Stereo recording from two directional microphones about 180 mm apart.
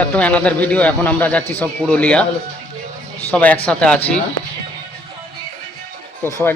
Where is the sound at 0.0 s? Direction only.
10° left (ahead or behind).